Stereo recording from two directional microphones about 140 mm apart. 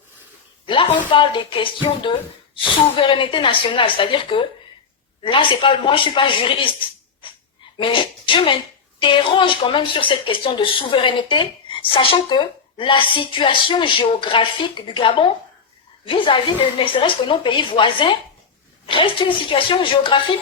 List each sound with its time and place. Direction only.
0.7 s speech: 35° left (ahead or behind)
7.8 s speech: 35° left (ahead or behind)